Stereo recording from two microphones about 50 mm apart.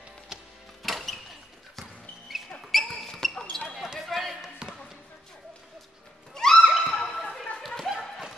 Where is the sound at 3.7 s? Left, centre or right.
Centre.